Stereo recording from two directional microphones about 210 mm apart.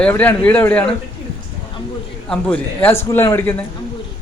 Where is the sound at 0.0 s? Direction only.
10° left (ahead or behind).